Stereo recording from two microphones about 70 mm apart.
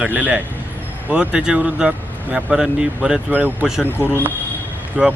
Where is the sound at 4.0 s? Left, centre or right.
Left.